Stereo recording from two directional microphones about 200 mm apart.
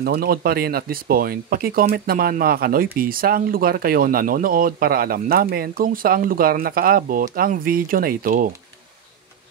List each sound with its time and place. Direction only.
0.0 s speech: 50° right (ahead or behind)